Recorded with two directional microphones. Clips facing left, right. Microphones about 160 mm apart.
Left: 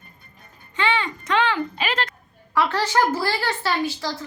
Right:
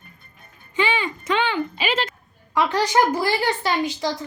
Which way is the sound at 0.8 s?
10° right (ahead or behind).